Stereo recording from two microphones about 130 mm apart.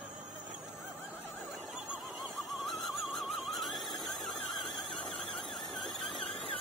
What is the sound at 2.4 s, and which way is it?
Neigh, centre (ahead or behind).